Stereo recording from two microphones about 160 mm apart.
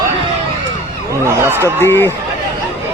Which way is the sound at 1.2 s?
15° right (ahead or behind).